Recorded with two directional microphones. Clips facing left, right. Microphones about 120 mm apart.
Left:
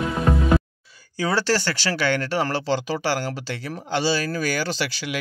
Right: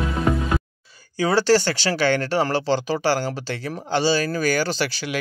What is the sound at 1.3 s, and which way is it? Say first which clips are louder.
Speech: right 6 dB; 25° right (ahead or behind).